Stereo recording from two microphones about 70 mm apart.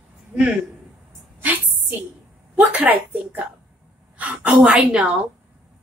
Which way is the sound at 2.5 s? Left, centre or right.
Right.